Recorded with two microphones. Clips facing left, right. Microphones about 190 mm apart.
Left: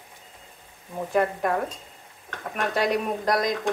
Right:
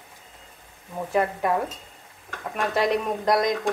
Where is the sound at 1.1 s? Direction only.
5° right (ahead or behind).